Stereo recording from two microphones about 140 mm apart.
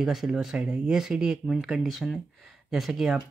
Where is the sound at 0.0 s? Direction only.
Centre (ahead or behind).